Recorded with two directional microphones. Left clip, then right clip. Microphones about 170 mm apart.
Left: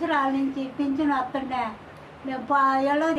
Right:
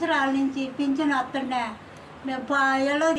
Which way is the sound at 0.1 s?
15° left (ahead or behind).